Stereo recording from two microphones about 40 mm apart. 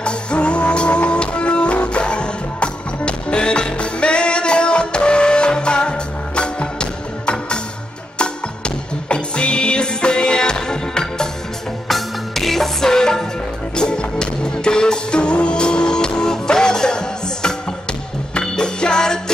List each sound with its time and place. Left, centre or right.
0.0 s music: left
11.9 s music: centre
18.6 s music: centre